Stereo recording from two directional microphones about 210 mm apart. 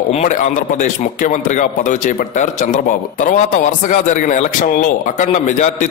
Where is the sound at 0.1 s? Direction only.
30° left (ahead or behind).